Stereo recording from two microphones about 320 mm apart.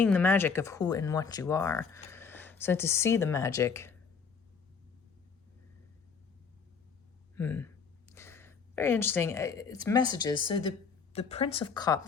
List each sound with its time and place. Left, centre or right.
0.0 s speech: centre
7.3 s speech: centre